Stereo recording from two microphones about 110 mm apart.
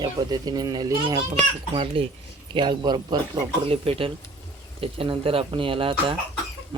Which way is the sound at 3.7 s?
60° right (ahead or behind).